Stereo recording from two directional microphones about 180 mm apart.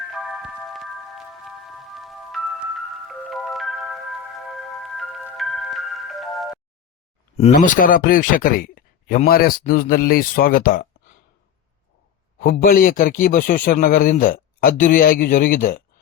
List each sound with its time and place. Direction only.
0.1 s music: centre (ahead or behind)
7.5 s speech: 50° left (ahead or behind)
12.4 s speech: 55° left (ahead or behind)